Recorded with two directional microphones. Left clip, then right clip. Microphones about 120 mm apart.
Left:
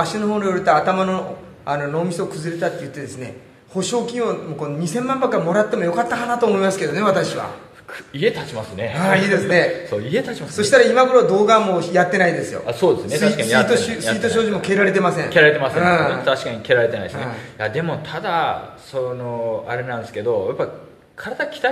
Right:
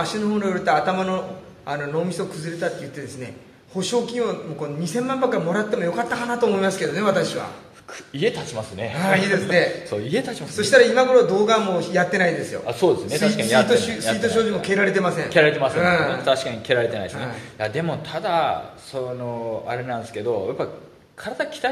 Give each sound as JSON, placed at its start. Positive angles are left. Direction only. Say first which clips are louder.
{"t": 0.0, "sound": "a man's voice", "louder": "left 4 dB", "side_deg": 25}
{"t": 8.2, "sound": "speech", "louder": "left 3 dB", "side_deg": -40}
{"t": 8.9, "sound": "a man's voice", "louder": "left 3 dB", "side_deg": 25}
{"t": 9.8, "sound": "speech", "louder": "left 3 dB", "side_deg": -35}
{"t": 10.5, "sound": "a man's voice", "louder": "left 2 dB", "side_deg": 25}
{"t": 12.6, "sound": "speech", "louder": "left 2 dB", "side_deg": -30}
{"t": 13.7, "sound": "a man's voice", "louder": "left 1 dB", "side_deg": 25}
{"t": 15.3, "sound": "speech", "louder": "left 3 dB", "side_deg": -35}
{"t": 15.8, "sound": "a man's voice", "louder": "left 3 dB", "side_deg": 25}
{"t": 16.3, "sound": "speech", "louder": "left 2 dB", "side_deg": -40}